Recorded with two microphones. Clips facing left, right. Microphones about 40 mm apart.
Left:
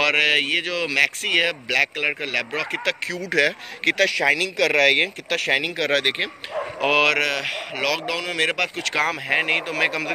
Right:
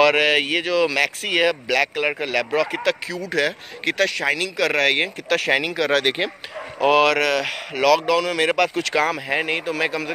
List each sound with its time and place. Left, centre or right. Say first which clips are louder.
0.0 s speech: right 2 dB; left
2.7 s speech: right 3 dB; left
3.1 s speech: left 1 dB; left
4.7 s speech: left 2 dB; left
5.8 s speech: right 2 dB; left
6.0 s speech: right 2 dB; centre
6.8 s speech: right 3 dB; left
7.2 s speech: right 3 dB; centre
9.6 s a man's voice: even; left